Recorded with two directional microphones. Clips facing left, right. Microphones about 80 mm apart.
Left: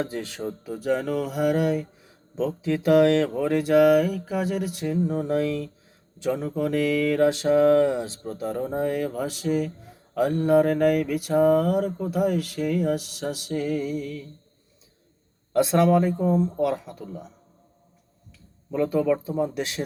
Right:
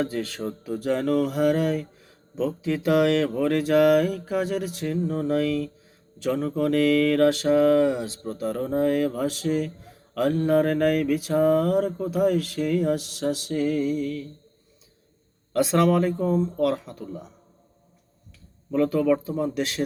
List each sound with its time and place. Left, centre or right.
0.0 s speech: centre
0.4 s mantra: centre
3.2 s mantra: centre
6.3 s mantra: centre
7.8 s speech: left
8.2 s mantra: centre
15.5 s mantra: centre
18.7 s mantra: centre